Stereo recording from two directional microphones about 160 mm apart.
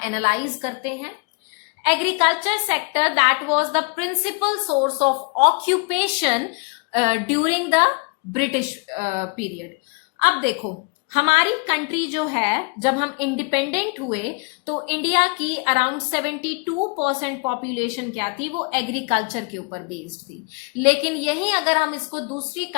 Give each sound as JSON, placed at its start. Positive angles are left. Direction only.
{"t": 0.0, "sound": "a woman's voice", "side_deg": -40}
{"t": 8.9, "sound": "a woman's voice", "side_deg": -45}